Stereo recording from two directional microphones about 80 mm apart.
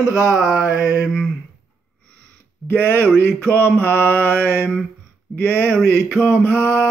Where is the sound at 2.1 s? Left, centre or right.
Centre.